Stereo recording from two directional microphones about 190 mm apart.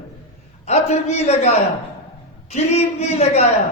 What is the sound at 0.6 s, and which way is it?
A man's voice, 35° left (ahead or behind).